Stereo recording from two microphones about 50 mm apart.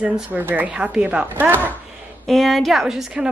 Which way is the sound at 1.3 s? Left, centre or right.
Right.